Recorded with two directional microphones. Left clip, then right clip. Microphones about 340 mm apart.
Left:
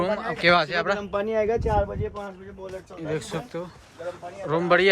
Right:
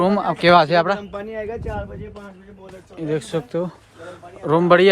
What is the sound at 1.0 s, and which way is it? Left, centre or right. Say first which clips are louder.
Speech: left 4 dB; centre.